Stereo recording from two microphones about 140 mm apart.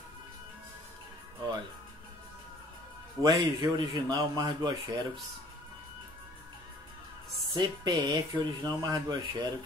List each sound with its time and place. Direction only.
3.2 s speech: 30° right (ahead or behind)
7.5 s speech: 30° right (ahead or behind)